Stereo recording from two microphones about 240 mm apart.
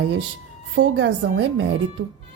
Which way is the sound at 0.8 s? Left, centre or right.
Right.